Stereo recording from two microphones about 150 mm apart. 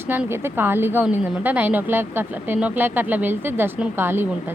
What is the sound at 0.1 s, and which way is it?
A woman's voice, 15° right (ahead or behind).